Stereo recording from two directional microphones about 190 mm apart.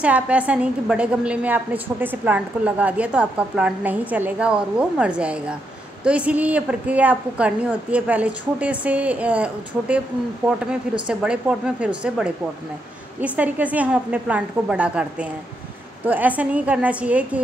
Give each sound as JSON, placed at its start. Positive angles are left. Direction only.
{"t": 0.0, "sound": "a woman's voice", "side_deg": -5}